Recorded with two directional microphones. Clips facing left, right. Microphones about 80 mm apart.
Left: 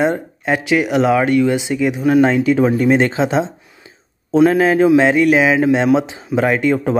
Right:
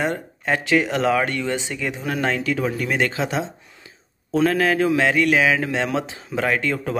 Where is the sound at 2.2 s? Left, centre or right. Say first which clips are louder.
Left 9 dB; left.